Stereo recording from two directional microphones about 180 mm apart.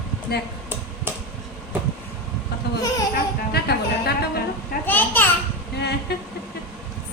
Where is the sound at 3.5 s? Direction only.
60° left (ahead or behind).